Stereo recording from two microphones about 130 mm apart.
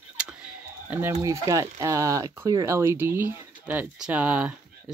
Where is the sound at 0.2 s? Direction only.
5° right (ahead or behind).